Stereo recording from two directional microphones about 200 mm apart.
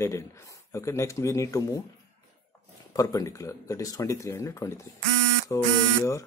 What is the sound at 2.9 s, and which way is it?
Speech, 15° left (ahead or behind).